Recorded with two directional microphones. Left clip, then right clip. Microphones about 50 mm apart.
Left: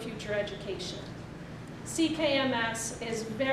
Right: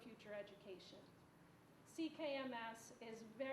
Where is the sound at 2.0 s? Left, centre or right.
Left.